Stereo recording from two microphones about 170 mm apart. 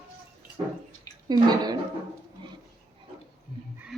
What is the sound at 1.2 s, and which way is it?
Speech, 25° right (ahead or behind).